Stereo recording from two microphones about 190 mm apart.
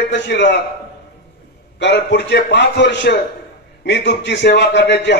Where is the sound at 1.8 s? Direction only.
65° left (ahead or behind).